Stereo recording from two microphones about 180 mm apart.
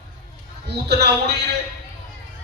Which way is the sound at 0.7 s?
70° right (ahead or behind).